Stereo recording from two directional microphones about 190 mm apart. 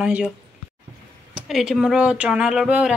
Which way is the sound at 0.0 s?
5° right (ahead or behind).